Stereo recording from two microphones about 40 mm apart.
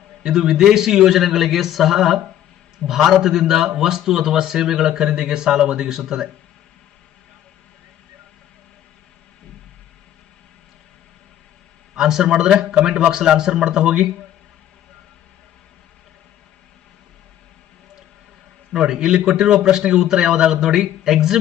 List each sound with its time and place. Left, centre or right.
0.2 s speech: centre
11.9 s a man's voice: centre
18.7 s a man's voice: right